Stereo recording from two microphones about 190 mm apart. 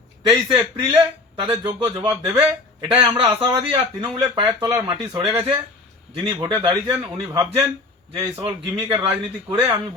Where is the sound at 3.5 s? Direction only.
25° right (ahead or behind).